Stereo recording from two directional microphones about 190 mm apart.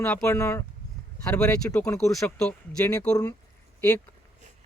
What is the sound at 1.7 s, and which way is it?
Speech, 10° left (ahead or behind).